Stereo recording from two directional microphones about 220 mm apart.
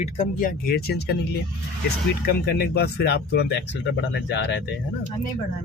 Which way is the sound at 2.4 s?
45° left (ahead or behind).